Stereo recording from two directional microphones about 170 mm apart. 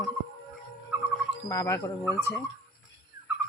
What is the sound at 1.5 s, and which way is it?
Speech, 20° left (ahead or behind).